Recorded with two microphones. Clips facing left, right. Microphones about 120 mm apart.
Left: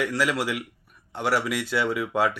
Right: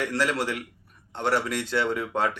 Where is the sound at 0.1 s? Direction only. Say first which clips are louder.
Left 1 dB; 5° left (ahead or behind).